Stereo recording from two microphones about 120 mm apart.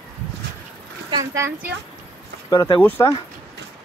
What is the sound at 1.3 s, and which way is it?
Speech, 20° right (ahead or behind).